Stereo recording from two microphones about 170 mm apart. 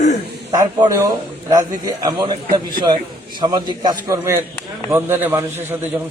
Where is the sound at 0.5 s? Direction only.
20° right (ahead or behind).